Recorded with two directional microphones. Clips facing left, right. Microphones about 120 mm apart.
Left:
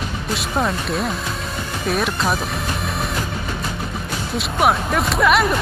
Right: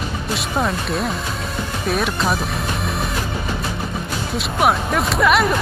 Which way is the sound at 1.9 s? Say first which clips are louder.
Even; centre (ahead or behind).